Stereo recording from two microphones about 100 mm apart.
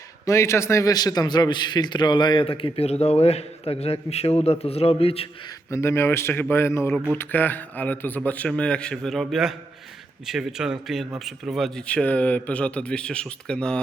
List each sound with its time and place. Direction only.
0.3 s a man's voice: 30° left (ahead or behind); by 5.3 s 75° left (ahead or behind)
5.7 s a man's voice: 25° left (ahead or behind); by 13.8 s 10° left (ahead or behind)